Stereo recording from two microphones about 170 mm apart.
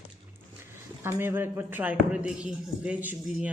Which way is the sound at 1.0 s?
15° right (ahead or behind).